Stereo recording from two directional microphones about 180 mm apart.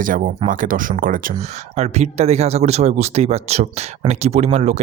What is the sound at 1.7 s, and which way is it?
Speech, 40° right (ahead or behind).